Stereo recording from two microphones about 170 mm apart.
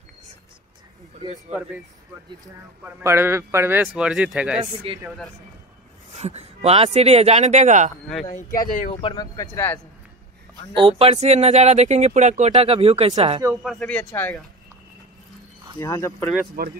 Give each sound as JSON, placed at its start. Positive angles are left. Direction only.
{"t": 2.8, "sound": "a man's voice", "side_deg": -15}
{"t": 4.9, "sound": "speech", "side_deg": -35}
{"t": 6.1, "sound": "speech", "side_deg": -40}
{"t": 8.3, "sound": "speech", "side_deg": 45}
{"t": 8.9, "sound": "speech", "side_deg": 25}
{"t": 10.7, "sound": "speech", "side_deg": -30}
{"t": 13.6, "sound": "speech", "side_deg": 5}
{"t": 15.8, "sound": "speech", "side_deg": 15}
{"t": 16.6, "sound": "speech", "side_deg": -65}